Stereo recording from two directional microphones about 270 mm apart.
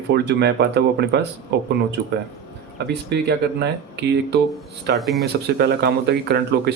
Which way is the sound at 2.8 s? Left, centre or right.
Right.